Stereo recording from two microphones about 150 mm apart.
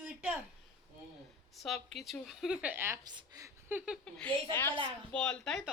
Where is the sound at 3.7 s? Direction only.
10° right (ahead or behind).